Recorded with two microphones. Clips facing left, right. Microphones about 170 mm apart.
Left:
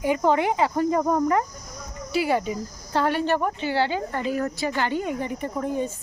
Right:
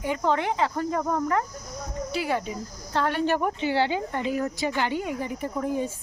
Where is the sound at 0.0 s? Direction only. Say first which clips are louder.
Left 4 dB; 10° left (ahead or behind).